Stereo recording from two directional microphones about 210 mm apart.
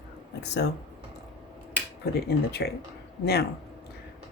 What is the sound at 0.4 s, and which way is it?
Speech, 55° left (ahead or behind).